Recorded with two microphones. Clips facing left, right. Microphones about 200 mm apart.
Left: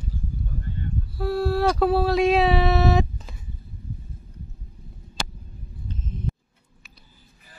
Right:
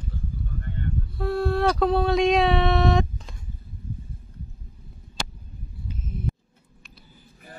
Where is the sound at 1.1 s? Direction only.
Centre (ahead or behind).